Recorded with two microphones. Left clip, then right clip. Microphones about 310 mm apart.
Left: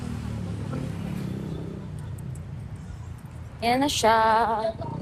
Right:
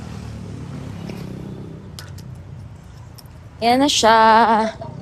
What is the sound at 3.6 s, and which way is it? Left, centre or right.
Speech, right.